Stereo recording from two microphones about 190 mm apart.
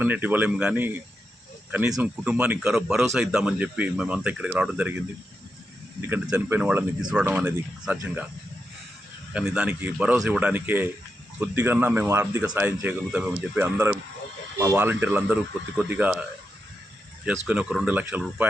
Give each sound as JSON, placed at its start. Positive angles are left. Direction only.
{"t": 0.0, "sound": "speech", "side_deg": -10}
{"t": 2.0, "sound": "speech", "side_deg": -5}
{"t": 6.2, "sound": "speech", "side_deg": -15}
{"t": 6.6, "sound": "speech", "side_deg": -5}
{"t": 9.3, "sound": "speech", "side_deg": -5}
{"t": 17.2, "sound": "speech", "side_deg": -5}